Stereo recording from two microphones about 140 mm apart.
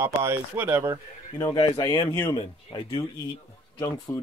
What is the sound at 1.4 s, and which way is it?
Speech, 30° left (ahead or behind).